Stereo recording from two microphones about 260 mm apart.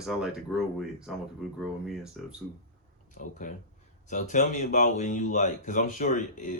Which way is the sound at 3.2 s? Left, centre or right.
Left.